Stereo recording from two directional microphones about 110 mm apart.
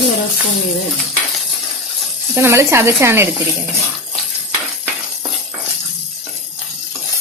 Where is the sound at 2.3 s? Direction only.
25° right (ahead or behind).